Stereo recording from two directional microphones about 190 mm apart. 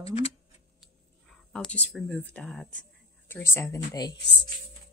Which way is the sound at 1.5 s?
5° left (ahead or behind).